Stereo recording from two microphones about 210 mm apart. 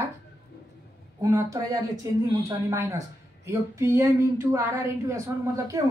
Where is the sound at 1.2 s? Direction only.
15° right (ahead or behind).